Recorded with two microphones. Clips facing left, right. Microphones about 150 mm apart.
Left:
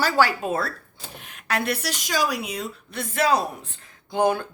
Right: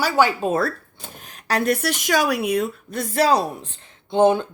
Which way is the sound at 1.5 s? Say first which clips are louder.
Right 5 dB; 45° right (ahead or behind).